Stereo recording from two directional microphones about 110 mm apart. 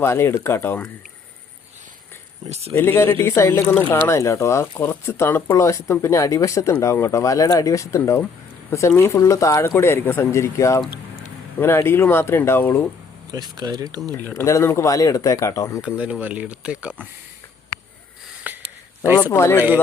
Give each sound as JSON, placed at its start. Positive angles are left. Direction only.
{"t": 0.0, "sound": "speech", "side_deg": 20}
{"t": 2.5, "sound": "speech", "side_deg": -75}
{"t": 2.7, "sound": "speech", "side_deg": 20}
{"t": 13.3, "sound": "speech", "side_deg": -40}
{"t": 14.3, "sound": "speech", "side_deg": 25}
{"t": 15.8, "sound": "speech", "side_deg": -10}
{"t": 18.5, "sound": "a sound", "side_deg": -15}
{"t": 19.0, "sound": "speech", "side_deg": -20}
{"t": 19.3, "sound": "speech", "side_deg": 25}